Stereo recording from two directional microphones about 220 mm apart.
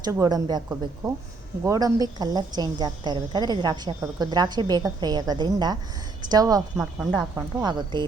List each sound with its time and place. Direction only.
0.0 s a woman's voice: 15° right (ahead or behind)
6.7 s speech: centre (ahead or behind)
7.3 s speech: 20° right (ahead or behind)